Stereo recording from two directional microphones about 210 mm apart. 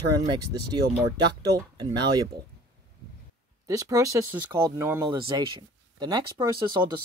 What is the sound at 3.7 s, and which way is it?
Speech, 15° right (ahead or behind).